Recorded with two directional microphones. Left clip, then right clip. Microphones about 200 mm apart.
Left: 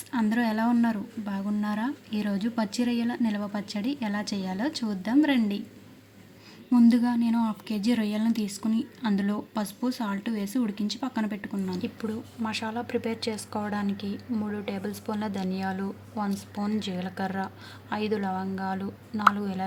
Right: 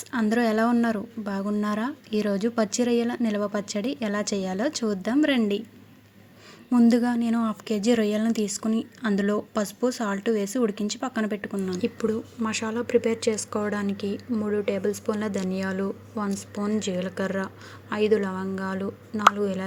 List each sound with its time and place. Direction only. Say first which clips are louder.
0.1 s a woman's voice: right 4 dB; 30° right (ahead or behind)
6.7 s a woman's voice: right 1 dB; 25° right (ahead or behind); by 19.6 s 5° right (ahead or behind)